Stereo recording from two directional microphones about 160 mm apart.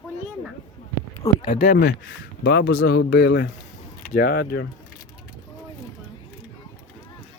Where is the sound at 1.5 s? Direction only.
70° left (ahead or behind).